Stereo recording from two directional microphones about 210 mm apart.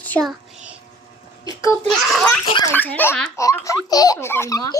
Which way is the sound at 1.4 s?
15° left (ahead or behind).